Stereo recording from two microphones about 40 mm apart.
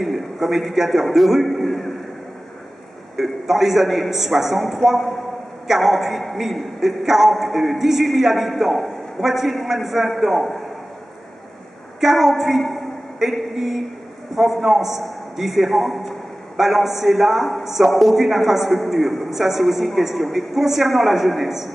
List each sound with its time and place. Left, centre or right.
0.0 s a man's voice: centre
3.2 s a man's voice: centre
12.0 s a man's voice: centre
13.2 s a sound: centre
13.6 s a man's voice: centre